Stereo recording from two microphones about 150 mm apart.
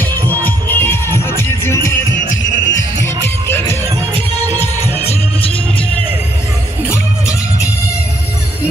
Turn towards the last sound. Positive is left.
turn(degrees=20)  # may be behind; listen again after turning